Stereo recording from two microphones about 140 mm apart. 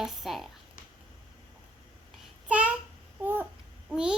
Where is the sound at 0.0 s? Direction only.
Centre (ahead or behind).